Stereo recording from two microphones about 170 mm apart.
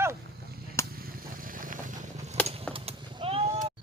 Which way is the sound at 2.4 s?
35° right (ahead or behind).